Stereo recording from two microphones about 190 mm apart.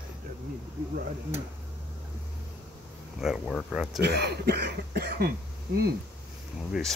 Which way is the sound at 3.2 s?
Centre (ahead or behind).